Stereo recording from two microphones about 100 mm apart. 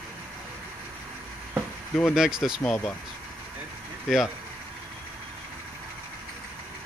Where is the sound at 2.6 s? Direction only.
10° left (ahead or behind).